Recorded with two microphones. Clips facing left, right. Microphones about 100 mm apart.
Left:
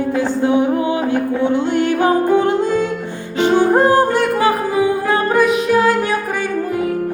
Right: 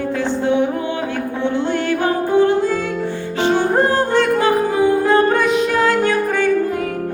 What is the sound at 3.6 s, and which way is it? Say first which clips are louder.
Music: left 6 dB; 15° left (ahead or behind).